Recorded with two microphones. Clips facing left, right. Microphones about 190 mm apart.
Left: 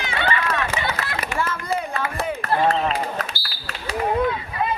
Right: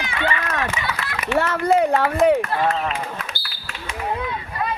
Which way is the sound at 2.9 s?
35° left (ahead or behind).